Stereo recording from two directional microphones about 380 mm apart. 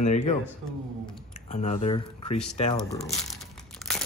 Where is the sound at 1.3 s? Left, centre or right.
Centre.